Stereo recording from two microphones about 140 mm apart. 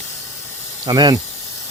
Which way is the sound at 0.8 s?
30° right (ahead or behind).